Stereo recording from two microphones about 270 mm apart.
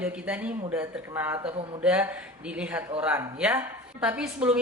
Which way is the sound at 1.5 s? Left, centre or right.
Centre.